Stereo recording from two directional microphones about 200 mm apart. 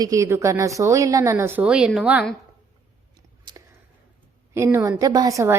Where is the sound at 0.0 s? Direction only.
15° right (ahead or behind).